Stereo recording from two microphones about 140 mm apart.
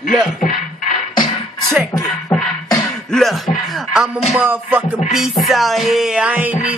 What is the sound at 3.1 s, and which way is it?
Music, centre (ahead or behind).